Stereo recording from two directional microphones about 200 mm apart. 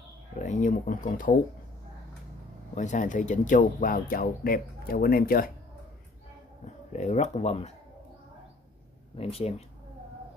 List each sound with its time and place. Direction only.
0.4 s speech: 40° left (ahead or behind)
2.7 s speech: 35° left (ahead or behind)
6.9 s speech: 35° left (ahead or behind)
9.1 s speech: 30° left (ahead or behind)